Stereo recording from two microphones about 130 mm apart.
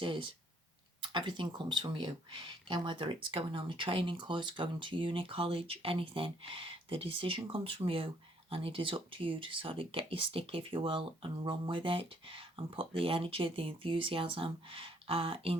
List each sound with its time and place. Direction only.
0.0 s speech: 40° right (ahead or behind)